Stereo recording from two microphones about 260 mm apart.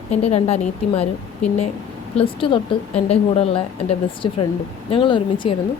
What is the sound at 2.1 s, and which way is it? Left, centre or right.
A woman's voice, left.